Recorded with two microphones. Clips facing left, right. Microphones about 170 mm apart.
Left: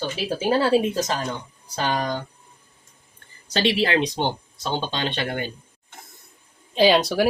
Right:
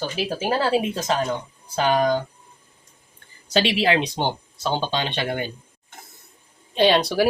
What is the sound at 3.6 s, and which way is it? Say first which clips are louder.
Speech: left 2 dB; 35° left (ahead or behind).